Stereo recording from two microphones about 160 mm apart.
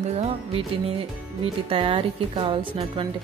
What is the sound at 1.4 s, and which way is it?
Speech, 35° right (ahead or behind).